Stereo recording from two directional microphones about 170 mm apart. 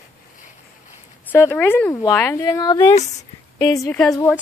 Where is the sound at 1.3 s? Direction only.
15° left (ahead or behind).